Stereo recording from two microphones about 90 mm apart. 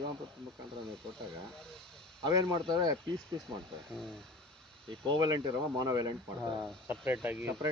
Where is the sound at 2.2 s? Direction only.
45° right (ahead or behind).